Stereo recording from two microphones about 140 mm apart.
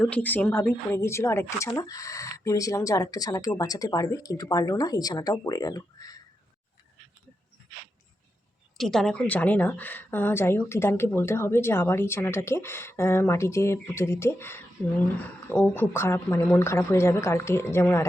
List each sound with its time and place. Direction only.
0.0 s a woman's voice: 10° left (ahead or behind); by 6.1 s 25° left (ahead or behind)
8.8 s a woman's voice: 5° left (ahead or behind)